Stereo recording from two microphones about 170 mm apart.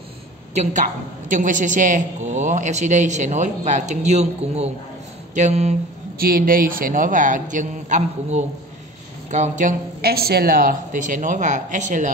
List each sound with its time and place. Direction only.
1.3 s a man's voice: 50° right (ahead or behind)
6.1 s a man's voice: 60° right (ahead or behind)